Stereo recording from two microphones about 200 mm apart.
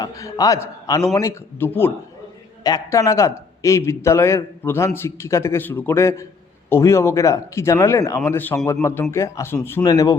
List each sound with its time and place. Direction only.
0.0 s speech: 15° left (ahead or behind)